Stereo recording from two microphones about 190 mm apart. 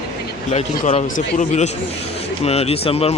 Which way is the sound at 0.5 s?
35° left (ahead or behind).